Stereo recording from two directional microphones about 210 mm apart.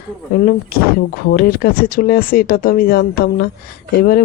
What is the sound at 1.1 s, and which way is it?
Speech, 45° left (ahead or behind).